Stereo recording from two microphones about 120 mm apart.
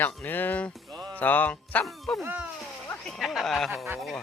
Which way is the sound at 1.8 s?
Centre (ahead or behind).